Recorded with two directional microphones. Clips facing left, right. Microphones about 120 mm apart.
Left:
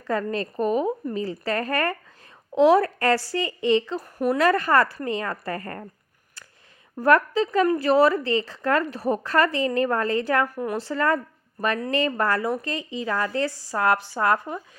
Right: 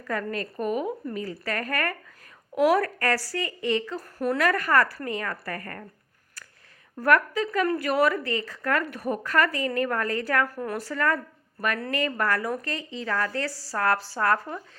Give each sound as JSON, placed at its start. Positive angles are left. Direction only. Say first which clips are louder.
{"t": 0.1, "sound": "a woman's voice", "louder": "left 4 dB", "side_deg": 25}
{"t": 4.4, "sound": "speech", "louder": "left 3 dB", "side_deg": 25}
{"t": 6.9, "sound": "speech", "louder": "left 3 dB", "side_deg": 25}
{"t": 10.8, "sound": "speech", "louder": "left 3 dB", "side_deg": 25}